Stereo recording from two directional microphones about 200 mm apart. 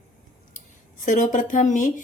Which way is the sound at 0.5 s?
40° left (ahead or behind).